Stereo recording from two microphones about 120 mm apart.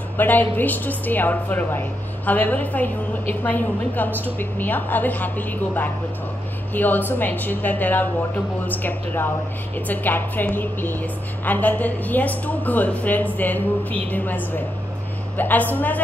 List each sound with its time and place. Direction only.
0.2 s a woman's voice: 15° left (ahead or behind)